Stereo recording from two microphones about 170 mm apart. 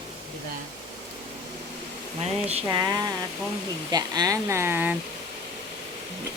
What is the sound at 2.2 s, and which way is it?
Speech, 40° right (ahead or behind).